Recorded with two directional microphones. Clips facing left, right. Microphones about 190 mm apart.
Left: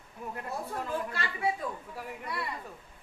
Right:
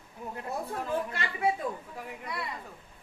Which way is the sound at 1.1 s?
25° right (ahead or behind).